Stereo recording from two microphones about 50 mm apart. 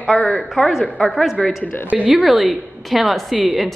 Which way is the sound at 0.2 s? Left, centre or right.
Centre.